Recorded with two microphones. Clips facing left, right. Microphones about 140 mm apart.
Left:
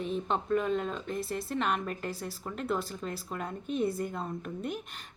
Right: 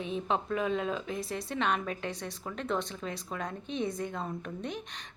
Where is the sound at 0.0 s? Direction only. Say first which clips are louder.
Even; centre (ahead or behind).